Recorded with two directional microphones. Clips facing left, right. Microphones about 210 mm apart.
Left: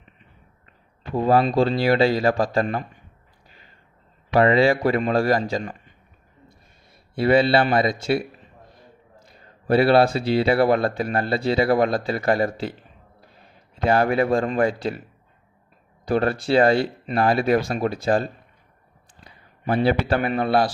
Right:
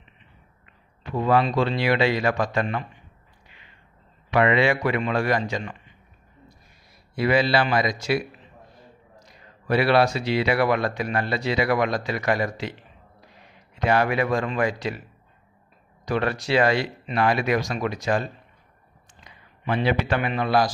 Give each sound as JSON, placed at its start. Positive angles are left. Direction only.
{"t": 1.1, "sound": "speech", "side_deg": 35}
{"t": 3.5, "sound": "a sound", "side_deg": 40}
{"t": 4.3, "sound": "speech", "side_deg": 35}
{"t": 7.2, "sound": "speech", "side_deg": 30}
{"t": 13.8, "sound": "speech", "side_deg": 30}
{"t": 16.0, "sound": "speech", "side_deg": 30}